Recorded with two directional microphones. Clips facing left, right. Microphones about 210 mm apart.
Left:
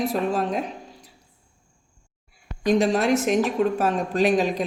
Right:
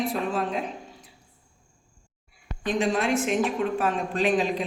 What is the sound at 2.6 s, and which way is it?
A woman's voice, 40° left (ahead or behind).